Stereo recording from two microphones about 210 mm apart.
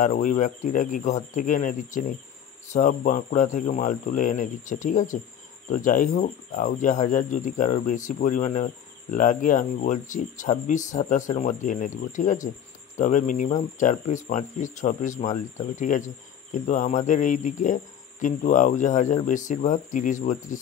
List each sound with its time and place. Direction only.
0.0 s speech: 40° left (ahead or behind)